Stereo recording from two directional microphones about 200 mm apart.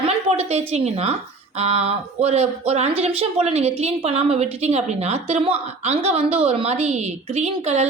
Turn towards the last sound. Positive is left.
turn(degrees=-35)  # may be behind; listen again after turning